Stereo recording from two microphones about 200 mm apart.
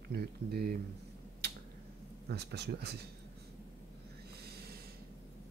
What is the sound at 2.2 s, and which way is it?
Speech, 55° right (ahead or behind).